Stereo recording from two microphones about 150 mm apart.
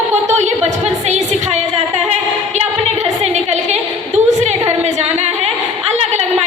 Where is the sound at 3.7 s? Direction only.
50° right (ahead or behind).